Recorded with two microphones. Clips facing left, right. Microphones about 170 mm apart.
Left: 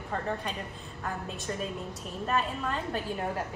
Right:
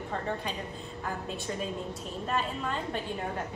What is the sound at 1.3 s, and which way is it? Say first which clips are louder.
A woman's voice: right 1 dB; centre (ahead or behind).